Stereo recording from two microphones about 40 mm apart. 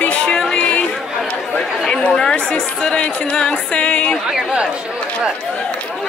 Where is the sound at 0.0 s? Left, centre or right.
Left.